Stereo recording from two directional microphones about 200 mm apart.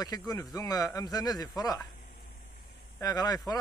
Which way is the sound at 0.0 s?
20° left (ahead or behind).